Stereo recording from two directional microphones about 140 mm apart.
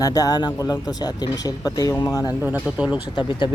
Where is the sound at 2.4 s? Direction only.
15° right (ahead or behind).